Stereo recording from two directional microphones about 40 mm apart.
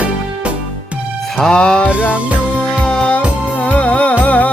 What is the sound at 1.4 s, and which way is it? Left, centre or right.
Music, centre.